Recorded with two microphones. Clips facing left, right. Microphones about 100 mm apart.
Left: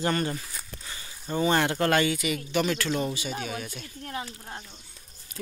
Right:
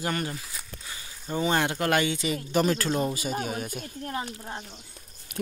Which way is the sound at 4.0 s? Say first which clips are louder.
Right 2 dB; 35° right (ahead or behind).